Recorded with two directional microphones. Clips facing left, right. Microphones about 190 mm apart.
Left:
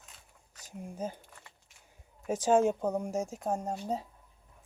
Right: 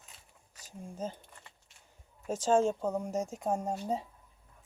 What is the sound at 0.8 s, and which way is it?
Speech, 15° left (ahead or behind).